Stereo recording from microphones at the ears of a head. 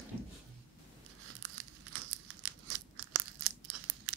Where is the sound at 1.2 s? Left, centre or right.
Right.